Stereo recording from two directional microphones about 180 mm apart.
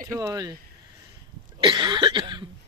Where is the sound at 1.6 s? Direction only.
25° right (ahead or behind).